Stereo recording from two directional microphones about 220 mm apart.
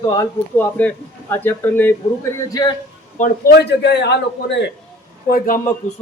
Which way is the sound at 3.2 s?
45° left (ahead or behind).